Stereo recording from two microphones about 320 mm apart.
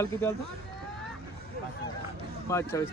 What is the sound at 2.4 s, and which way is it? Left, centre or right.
Speech, centre.